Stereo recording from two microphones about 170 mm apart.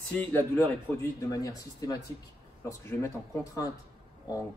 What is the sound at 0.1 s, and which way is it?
Speech, 10° left (ahead or behind).